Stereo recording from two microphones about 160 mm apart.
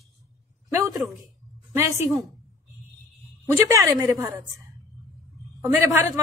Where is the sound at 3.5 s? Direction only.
20° right (ahead or behind).